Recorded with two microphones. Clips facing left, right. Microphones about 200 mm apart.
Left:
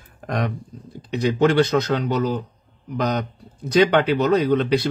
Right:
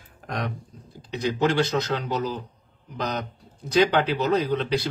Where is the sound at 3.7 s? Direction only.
65° left (ahead or behind).